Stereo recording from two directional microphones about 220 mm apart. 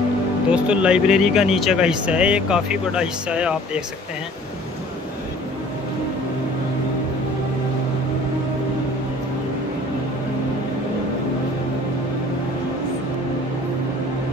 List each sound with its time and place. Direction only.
0.5 s speech: 5° right (ahead or behind)